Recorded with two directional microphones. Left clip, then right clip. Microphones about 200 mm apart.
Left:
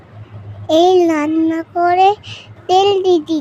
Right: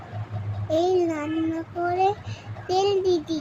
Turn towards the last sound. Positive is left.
turn(degrees=45)  # may be behind; listen again after turning